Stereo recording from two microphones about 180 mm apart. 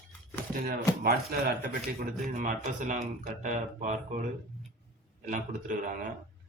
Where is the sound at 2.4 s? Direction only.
45° right (ahead or behind).